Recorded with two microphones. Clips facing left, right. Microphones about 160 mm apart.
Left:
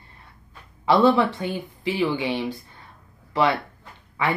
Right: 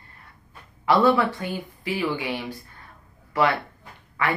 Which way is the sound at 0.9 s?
20° left (ahead or behind).